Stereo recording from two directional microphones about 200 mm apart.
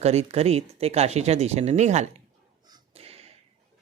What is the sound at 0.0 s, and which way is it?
Speech, 30° right (ahead or behind).